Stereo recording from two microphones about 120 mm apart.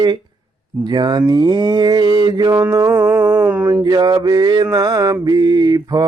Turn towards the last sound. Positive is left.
turn(degrees=-35)  # may be behind; listen again after turning